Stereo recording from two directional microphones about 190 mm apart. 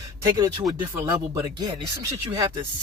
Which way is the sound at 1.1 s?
20° right (ahead or behind).